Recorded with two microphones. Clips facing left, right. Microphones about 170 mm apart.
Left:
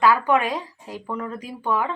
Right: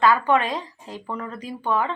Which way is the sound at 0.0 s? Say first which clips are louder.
Even; 10° left (ahead or behind).